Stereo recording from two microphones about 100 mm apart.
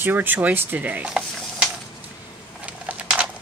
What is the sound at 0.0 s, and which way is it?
Speech, 20° right (ahead or behind).